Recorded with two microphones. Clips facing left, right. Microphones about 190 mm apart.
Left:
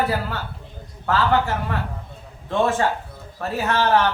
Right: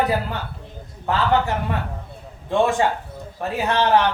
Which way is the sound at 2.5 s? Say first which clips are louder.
Right 1 dB; 15° right (ahead or behind).